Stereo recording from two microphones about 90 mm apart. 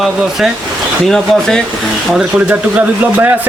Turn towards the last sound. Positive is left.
turn(degrees=-20)  # may be behind; listen again after turning